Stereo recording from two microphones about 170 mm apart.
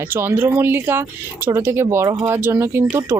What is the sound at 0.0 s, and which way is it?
Speech, 15° right (ahead or behind).